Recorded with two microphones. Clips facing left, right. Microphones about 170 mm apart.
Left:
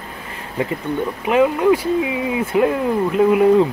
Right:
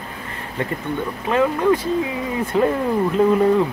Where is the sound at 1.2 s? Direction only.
15° left (ahead or behind).